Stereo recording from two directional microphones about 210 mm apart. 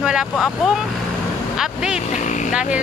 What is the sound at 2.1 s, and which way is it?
Speech, 35° left (ahead or behind).